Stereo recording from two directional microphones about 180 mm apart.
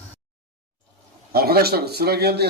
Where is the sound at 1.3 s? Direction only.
60° right (ahead or behind).